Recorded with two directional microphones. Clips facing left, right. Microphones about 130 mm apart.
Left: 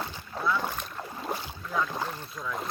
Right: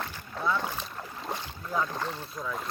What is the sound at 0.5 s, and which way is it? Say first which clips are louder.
Boat: left 1 dB; centre (ahead or behind).